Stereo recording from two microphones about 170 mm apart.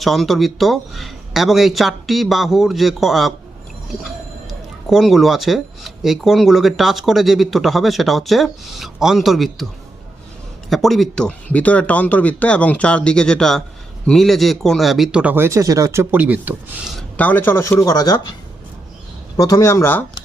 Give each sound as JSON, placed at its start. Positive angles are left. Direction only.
{"t": 0.0, "sound": "speech", "side_deg": 0}
{"t": 4.9, "sound": "speech", "side_deg": 0}
{"t": 10.7, "sound": "speech", "side_deg": 0}
{"t": 17.2, "sound": "speech", "side_deg": 10}
{"t": 19.4, "sound": "speech", "side_deg": 20}